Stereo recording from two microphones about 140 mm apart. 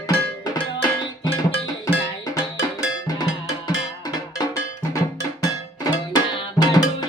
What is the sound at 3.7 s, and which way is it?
Cowbell, 25° left (ahead or behind).